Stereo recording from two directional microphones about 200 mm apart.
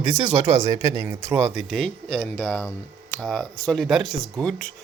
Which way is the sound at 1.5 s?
5° left (ahead or behind).